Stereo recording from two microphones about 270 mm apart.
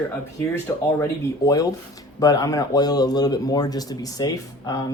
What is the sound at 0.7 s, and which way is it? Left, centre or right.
Speech, centre.